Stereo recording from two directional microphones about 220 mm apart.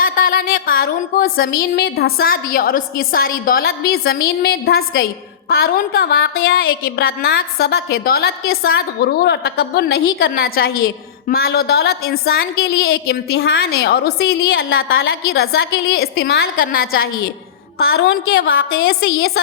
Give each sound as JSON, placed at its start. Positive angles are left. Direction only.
{"t": 0.0, "sound": "a woman's voice", "side_deg": 40}
{"t": 14.8, "sound": "a woman's voice", "side_deg": 70}
{"t": 15.3, "sound": "a woman's voice", "side_deg": 45}